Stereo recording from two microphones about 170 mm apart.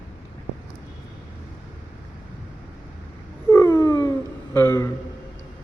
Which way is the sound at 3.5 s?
20° left (ahead or behind).